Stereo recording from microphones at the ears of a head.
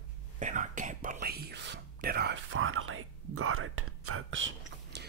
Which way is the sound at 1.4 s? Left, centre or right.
Right.